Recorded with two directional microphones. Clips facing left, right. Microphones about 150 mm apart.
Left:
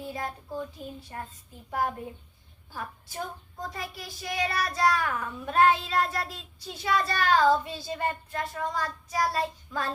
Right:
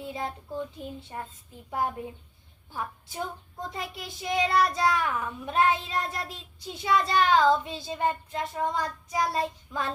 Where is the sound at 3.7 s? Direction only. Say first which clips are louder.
Right 2 dB; 20° right (ahead or behind).